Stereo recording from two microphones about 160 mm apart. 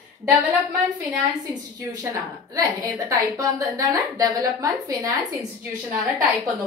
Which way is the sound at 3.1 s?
20° right (ahead or behind).